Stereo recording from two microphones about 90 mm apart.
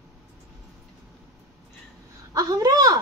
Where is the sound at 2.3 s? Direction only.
45° right (ahead or behind).